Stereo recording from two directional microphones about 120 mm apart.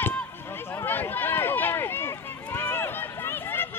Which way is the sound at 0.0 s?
20° left (ahead or behind).